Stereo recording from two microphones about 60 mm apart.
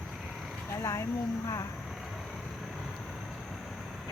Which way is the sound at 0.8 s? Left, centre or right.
Left.